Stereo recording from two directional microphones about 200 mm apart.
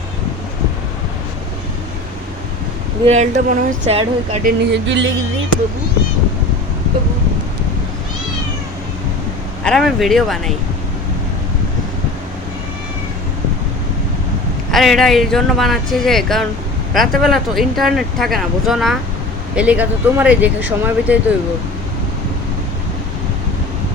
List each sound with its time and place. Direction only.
3.1 s speech: 35° right (ahead or behind)
4.4 s a sound: 60° right (ahead or behind)
9.6 s speech: centre (ahead or behind)
14.7 s speech: centre (ahead or behind)